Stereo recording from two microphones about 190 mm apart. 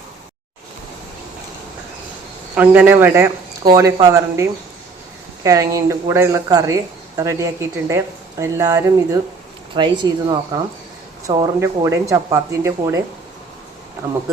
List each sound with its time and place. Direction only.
2.6 s speech: 10° right (ahead or behind)